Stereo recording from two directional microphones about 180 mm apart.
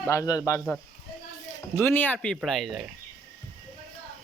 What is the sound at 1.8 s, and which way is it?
Speech, 10° left (ahead or behind).